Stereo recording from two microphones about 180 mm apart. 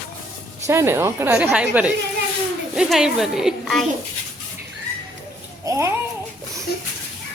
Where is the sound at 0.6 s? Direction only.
15° right (ahead or behind).